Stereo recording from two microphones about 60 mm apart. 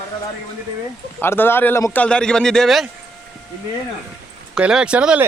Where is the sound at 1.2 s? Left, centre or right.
Left.